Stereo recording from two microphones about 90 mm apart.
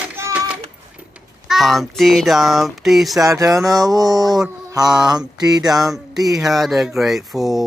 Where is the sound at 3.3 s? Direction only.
40° right (ahead or behind).